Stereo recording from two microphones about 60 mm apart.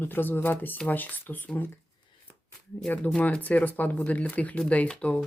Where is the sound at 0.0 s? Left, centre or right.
Left.